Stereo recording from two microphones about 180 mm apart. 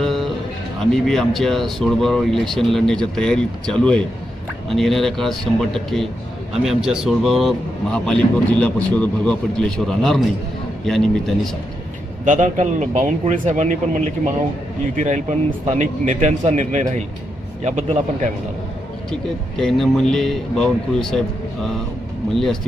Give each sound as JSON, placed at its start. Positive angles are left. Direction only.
{"t": 0.0, "sound": "music", "side_deg": 0}
{"t": 0.9, "sound": "a man's voice", "side_deg": 0}
{"t": 12.2, "sound": "a man's voice", "side_deg": -45}
{"t": 19.5, "sound": "a man's voice", "side_deg": 0}